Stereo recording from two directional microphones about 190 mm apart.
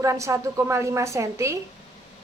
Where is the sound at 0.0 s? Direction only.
15° right (ahead or behind).